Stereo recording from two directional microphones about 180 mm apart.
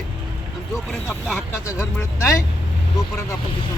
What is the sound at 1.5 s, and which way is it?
Speech, 15° left (ahead or behind).